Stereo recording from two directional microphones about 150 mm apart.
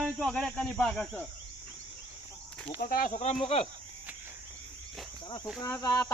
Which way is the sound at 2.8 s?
70° left (ahead or behind).